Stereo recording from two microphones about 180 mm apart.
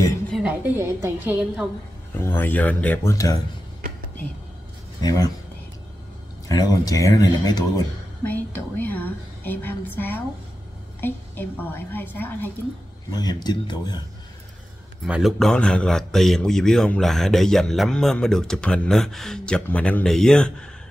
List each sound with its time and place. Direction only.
0.3 s a woman's voice: 5° right (ahead or behind)
2.1 s a woman's voice: 10° left (ahead or behind)
5.0 s speech: 20° left (ahead or behind)
6.5 s speech: 20° left (ahead or behind)
8.2 s a woman's voice: 10° left (ahead or behind)
13.1 s speech: 20° left (ahead or behind)
15.0 s a man's voice: 5° right (ahead or behind)